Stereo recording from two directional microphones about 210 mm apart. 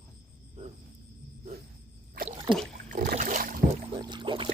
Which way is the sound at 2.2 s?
45° right (ahead or behind).